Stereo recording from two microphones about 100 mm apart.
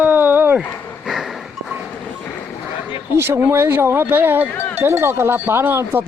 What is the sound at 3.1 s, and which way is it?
Speech, 25° right (ahead or behind).